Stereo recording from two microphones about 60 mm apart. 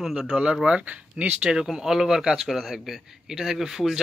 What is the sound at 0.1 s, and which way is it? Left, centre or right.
Speech, centre.